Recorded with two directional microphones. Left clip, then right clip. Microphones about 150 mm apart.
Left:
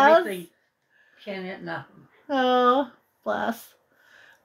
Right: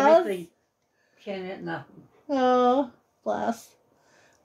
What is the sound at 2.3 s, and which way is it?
Speech, 5° right (ahead or behind).